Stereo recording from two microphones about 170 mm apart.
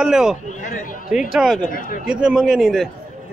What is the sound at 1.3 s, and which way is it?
Speech, centre (ahead or behind).